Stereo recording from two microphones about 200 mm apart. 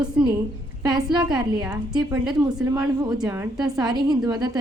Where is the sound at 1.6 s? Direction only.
5° right (ahead or behind).